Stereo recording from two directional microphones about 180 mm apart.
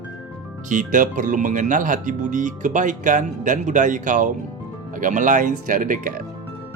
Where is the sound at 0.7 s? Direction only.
45° right (ahead or behind).